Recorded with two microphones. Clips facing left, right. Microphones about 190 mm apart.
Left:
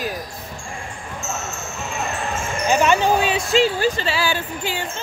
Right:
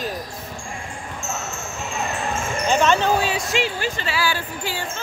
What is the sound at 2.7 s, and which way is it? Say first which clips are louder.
Basketball bounce: left 2 dB; 10° left (ahead or behind).